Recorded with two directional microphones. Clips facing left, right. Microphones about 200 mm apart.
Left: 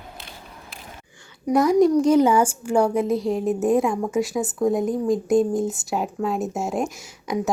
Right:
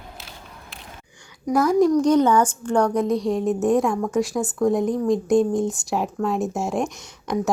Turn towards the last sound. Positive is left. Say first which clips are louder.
# right 1 dB
turn(degrees=5)  # may be behind; listen again after turning